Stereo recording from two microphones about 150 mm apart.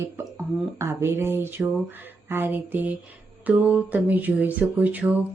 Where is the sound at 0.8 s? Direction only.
15° right (ahead or behind).